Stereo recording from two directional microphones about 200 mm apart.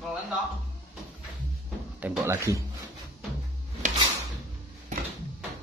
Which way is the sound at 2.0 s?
10° right (ahead or behind).